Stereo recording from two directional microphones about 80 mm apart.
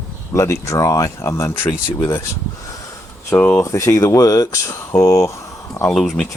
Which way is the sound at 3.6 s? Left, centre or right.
Left.